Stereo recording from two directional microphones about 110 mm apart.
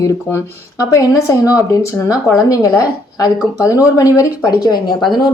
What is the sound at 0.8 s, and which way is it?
Speech, 30° left (ahead or behind).